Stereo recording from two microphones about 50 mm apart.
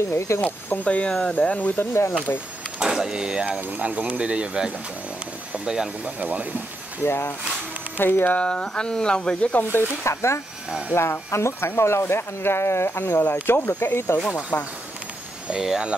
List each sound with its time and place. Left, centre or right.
0.1 s speech: left
0.8 s speech: left
1.8 s speech: left
2.8 s speech: centre
3.4 s speech: right
6.0 s speech: right
7.0 s speech: left
8.4 s speech: centre
9.6 s speech: left
10.0 s speech: left
10.9 s speech: left
15.5 s speech: centre